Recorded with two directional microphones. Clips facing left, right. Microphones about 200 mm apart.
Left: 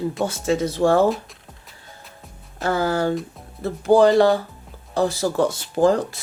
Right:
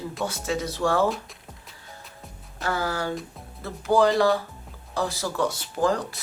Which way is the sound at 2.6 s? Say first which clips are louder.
Left 7 dB; 25° left (ahead or behind).